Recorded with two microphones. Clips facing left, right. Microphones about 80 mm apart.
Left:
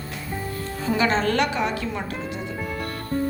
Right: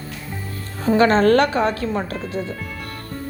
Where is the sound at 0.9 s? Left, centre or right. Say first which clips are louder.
Right 8 dB; right.